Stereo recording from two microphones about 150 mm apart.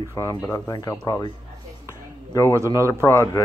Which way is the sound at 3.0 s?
15° left (ahead or behind).